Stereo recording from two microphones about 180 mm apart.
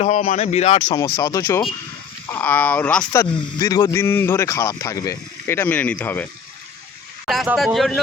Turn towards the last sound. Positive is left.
turn(degrees=0)  # may be behind; listen again after turning